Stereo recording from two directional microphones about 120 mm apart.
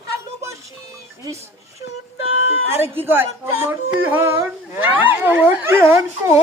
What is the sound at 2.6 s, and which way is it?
Speech, 20° right (ahead or behind).